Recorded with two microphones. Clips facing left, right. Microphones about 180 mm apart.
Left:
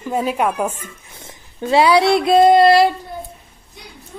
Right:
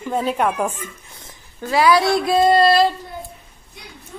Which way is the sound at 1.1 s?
25° left (ahead or behind).